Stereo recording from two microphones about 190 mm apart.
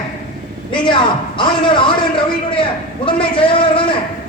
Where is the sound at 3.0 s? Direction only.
25° left (ahead or behind).